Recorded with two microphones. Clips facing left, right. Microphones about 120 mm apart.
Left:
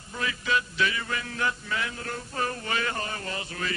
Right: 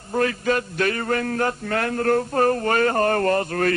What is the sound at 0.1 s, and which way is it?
Speech, 50° right (ahead or behind).